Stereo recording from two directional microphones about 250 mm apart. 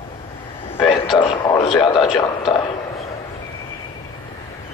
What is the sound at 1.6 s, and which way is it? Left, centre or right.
Speech, centre.